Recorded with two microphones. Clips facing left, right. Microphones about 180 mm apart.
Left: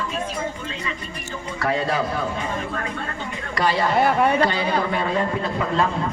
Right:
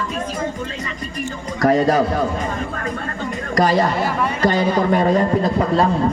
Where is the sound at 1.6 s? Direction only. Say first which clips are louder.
Right 8 dB; 40° right (ahead or behind).